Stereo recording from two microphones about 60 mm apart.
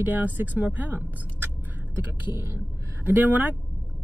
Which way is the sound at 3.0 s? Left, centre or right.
Right.